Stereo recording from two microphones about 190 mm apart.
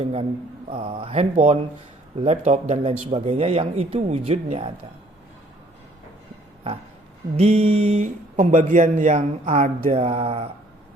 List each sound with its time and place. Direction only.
0.0 s speech: 35° right (ahead or behind)
7.3 s speech: 35° right (ahead or behind)